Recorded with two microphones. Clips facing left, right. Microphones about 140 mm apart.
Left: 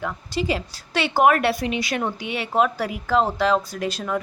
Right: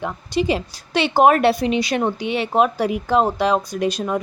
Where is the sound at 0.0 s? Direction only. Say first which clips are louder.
Right 5 dB; 20° right (ahead or behind).